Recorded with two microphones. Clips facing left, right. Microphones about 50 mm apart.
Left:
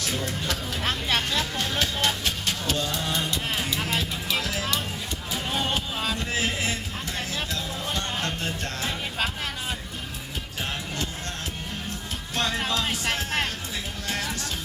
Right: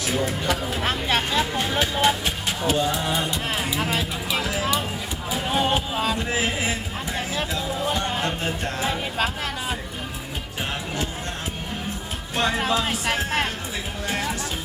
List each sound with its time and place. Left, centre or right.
0.0 s speech: centre
5.3 s a sound: centre
7.2 s music: centre
12.4 s speech: centre
14.1 s music: centre